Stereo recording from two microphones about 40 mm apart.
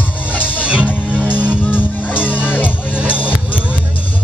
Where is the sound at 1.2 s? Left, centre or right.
Left.